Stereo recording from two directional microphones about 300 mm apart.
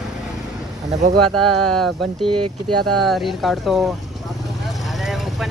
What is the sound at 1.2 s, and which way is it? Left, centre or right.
Speech, centre.